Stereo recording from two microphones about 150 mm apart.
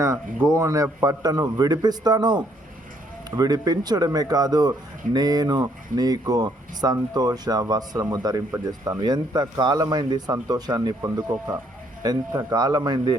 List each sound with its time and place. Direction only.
0.0 s speech: 20° right (ahead or behind)